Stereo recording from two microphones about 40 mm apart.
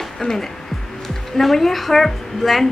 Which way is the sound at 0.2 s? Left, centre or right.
Centre.